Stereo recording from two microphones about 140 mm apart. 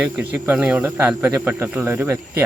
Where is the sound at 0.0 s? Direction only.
10° right (ahead or behind).